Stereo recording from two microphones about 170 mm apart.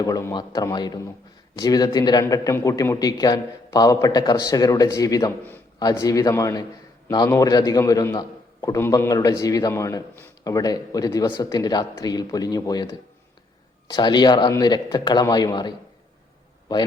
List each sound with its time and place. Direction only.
0.0 s a man's voice: 20° left (ahead or behind)